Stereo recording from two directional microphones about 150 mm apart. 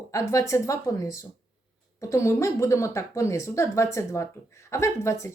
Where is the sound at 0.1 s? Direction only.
20° left (ahead or behind).